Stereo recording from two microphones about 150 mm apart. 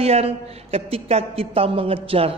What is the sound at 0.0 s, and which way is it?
A man's voice, 40° right (ahead or behind).